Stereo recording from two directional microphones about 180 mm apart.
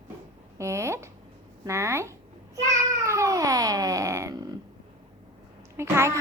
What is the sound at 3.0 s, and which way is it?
Cat, 15° right (ahead or behind).